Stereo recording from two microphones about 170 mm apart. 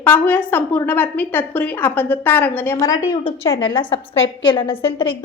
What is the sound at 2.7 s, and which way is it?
A woman's voice, 20° left (ahead or behind).